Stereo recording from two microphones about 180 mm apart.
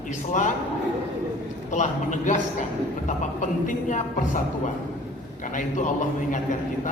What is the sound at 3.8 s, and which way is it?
Speech, 45° left (ahead or behind).